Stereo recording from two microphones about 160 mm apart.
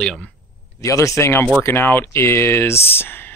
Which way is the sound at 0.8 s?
20° left (ahead or behind).